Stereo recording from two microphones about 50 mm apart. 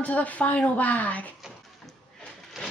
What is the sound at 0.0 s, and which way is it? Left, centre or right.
Speech, left.